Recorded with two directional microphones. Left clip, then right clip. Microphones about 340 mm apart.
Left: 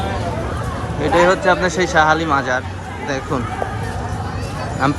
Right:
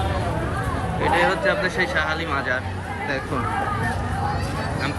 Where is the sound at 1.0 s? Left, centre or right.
Centre.